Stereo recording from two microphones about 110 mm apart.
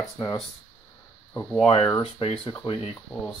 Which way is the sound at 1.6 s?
55° left (ahead or behind).